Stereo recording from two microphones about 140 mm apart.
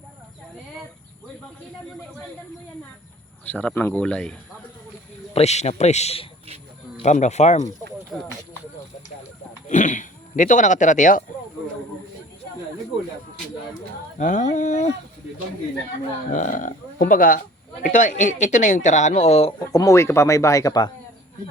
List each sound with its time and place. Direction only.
3.4 s speech: 10° left (ahead or behind)
5.3 s a man's voice: 50° left (ahead or behind)
8.1 s speech: centre (ahead or behind)
9.6 s speech: 60° left (ahead or behind)
14.2 s speech: 60° left (ahead or behind)
16.3 s speech: 65° left (ahead or behind)
17.8 s speech: 65° left (ahead or behind); by 19.5 s 50° left (ahead or behind)
19.5 s speech: 25° left (ahead or behind)